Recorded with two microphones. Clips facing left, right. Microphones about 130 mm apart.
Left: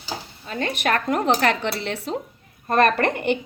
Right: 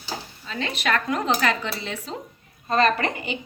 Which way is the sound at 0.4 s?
50° left (ahead or behind).